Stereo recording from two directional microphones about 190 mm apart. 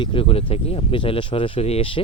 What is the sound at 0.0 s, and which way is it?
Speech, 30° left (ahead or behind).